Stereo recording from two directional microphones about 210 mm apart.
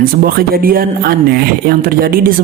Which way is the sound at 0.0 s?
45° right (ahead or behind).